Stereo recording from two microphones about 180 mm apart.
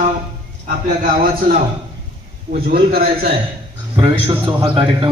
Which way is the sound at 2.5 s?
55° right (ahead or behind).